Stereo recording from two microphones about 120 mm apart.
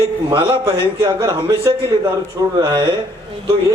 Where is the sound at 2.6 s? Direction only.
40° right (ahead or behind).